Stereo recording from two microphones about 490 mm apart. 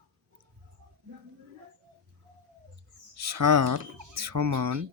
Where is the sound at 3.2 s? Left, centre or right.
Right.